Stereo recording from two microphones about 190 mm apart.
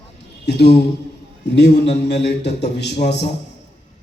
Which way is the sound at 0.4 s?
60° left (ahead or behind).